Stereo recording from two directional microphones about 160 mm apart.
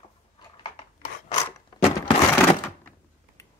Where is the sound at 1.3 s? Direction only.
30° left (ahead or behind).